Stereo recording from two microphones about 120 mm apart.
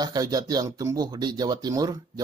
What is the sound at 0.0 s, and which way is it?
Speech, 35° right (ahead or behind).